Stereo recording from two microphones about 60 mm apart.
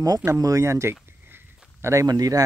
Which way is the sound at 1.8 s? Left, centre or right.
Right.